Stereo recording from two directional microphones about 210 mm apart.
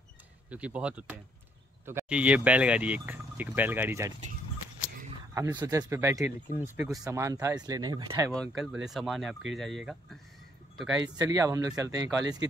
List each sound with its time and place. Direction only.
0.5 s speech: 5° right (ahead or behind)
5.3 s speech: 15° right (ahead or behind)
8.3 s speech: centre (ahead or behind)
11.1 s speech: 15° right (ahead or behind)